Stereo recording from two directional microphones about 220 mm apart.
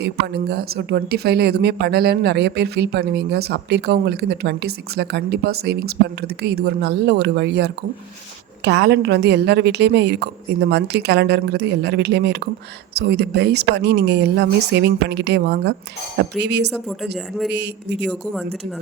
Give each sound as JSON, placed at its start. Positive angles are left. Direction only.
{"t": 0.0, "sound": "a woman's voice", "side_deg": -45}
{"t": 16.7, "sound": "speech", "side_deg": 0}
{"t": 17.5, "sound": "a woman's voice", "side_deg": -50}